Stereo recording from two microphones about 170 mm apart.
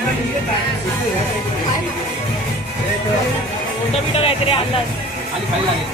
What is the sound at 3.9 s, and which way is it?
Speech, 35° left (ahead or behind).